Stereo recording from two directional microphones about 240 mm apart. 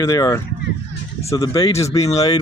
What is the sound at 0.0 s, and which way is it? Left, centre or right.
Speech, centre.